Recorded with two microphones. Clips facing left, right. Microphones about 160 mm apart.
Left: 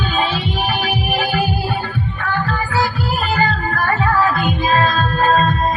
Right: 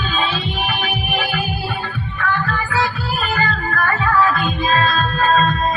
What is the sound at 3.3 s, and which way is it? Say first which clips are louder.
Music: left 3 dB; 35° left (ahead or behind).